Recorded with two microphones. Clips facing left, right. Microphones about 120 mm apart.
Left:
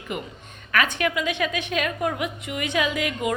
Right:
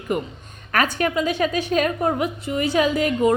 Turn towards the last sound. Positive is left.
turn(degrees=-35)  # may be behind; listen again after turning